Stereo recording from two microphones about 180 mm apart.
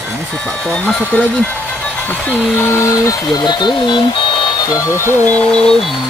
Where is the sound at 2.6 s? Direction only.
15° left (ahead or behind).